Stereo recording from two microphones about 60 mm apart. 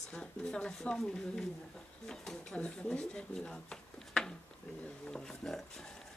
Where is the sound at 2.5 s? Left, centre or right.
Centre.